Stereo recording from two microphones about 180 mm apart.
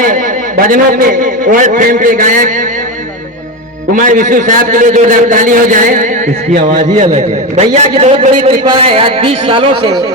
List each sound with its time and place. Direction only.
0.7 s a man's voice: 50° right (ahead or behind)
3.9 s a man's voice: 45° right (ahead or behind); by 10.0 s 25° right (ahead or behind)